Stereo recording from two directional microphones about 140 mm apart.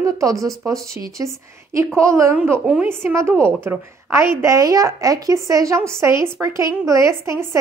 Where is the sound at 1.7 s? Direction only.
20° right (ahead or behind).